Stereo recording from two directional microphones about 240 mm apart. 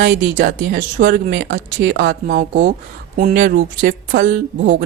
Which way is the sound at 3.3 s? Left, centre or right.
Right.